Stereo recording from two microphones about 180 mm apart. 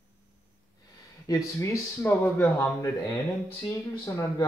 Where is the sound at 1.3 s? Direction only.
20° left (ahead or behind).